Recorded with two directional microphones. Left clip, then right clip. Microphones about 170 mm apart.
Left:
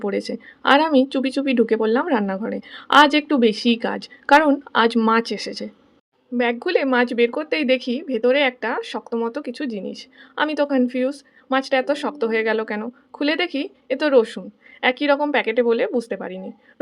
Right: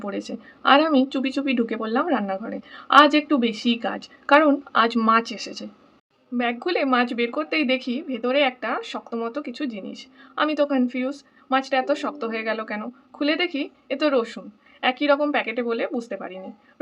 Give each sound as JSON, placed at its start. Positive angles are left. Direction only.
{"t": 0.0, "sound": "a woman's voice", "side_deg": 30}